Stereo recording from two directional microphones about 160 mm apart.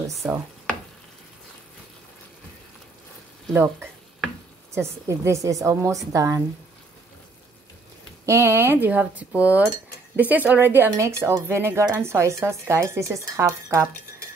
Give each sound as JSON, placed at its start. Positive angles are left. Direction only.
{"t": 0.2, "sound": "speech", "side_deg": 0}
{"t": 3.5, "sound": "a woman's voice", "side_deg": -15}
{"t": 8.3, "sound": "speech", "side_deg": -15}